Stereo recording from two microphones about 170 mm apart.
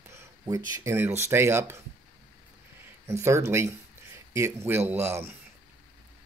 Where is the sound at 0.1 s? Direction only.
20° right (ahead or behind).